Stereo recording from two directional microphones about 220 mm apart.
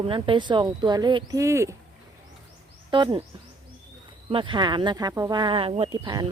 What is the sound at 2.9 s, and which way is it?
Speech, 20° right (ahead or behind).